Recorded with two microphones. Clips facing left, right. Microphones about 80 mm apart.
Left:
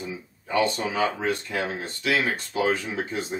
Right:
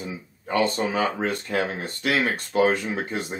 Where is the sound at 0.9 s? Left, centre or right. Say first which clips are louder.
Right 1 dB; right.